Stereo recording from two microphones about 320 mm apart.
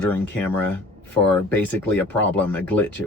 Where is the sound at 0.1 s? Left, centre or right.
Centre.